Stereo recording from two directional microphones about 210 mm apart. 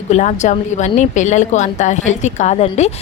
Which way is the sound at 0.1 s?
35° left (ahead or behind).